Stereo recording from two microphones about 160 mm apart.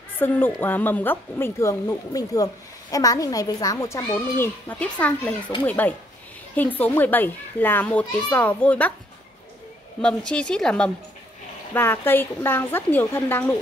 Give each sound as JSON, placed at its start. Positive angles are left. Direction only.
{"t": 0.2, "sound": "speech", "side_deg": 10}
{"t": 4.1, "sound": "a woman's voice", "side_deg": 10}
{"t": 10.0, "sound": "a woman's voice", "side_deg": 5}